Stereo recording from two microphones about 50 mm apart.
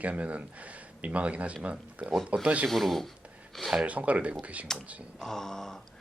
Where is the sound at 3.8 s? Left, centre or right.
Right.